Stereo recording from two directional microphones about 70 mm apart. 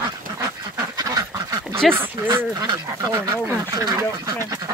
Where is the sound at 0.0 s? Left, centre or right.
Right.